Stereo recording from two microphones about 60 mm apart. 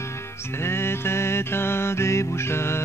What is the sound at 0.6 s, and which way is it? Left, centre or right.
Music, left.